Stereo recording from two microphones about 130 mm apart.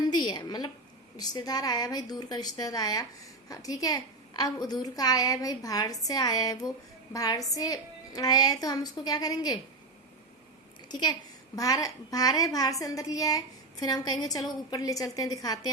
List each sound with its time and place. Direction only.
0.0 s a sound: 35° left (ahead or behind)
1.1 s a woman's voice: 30° left (ahead or behind)
10.8 s a woman's voice: 35° left (ahead or behind)